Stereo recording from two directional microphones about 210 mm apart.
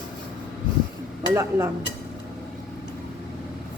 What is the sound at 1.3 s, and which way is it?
Speech, 15° right (ahead or behind).